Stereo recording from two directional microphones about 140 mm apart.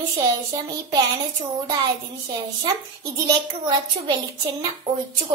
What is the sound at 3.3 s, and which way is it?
Speech, 30° right (ahead or behind).